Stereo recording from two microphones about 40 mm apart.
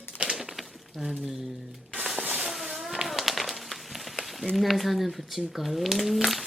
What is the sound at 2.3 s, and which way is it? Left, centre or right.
Insect, centre.